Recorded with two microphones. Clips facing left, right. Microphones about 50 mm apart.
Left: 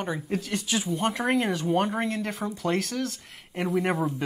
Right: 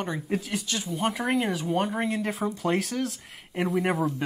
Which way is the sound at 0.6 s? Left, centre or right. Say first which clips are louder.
Left 3 dB; centre.